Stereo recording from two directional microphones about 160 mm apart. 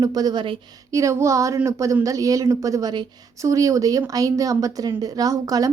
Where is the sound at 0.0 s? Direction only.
25° right (ahead or behind).